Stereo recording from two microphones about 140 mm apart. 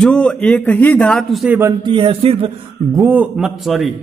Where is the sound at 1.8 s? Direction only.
40° right (ahead or behind).